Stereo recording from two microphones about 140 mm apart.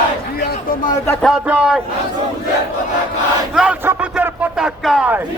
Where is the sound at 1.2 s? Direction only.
5° right (ahead or behind).